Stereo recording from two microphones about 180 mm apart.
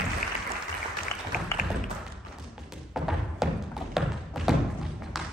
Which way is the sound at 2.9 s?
Centre (ahead or behind).